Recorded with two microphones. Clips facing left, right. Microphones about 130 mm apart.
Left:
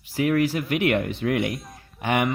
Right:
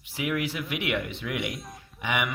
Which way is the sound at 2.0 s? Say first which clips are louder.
Left 6 dB; 50° left (ahead or behind).